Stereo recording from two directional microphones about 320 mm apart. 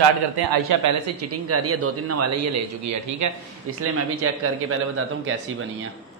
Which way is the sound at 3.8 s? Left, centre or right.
Right.